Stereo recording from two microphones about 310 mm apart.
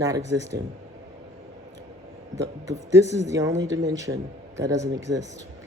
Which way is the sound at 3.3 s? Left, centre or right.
Centre.